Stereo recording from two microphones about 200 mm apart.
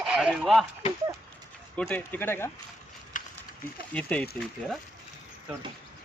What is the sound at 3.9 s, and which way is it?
Speech, 5° left (ahead or behind).